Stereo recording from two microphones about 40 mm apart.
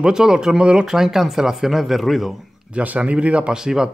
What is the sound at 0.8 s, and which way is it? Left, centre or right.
Speech, centre.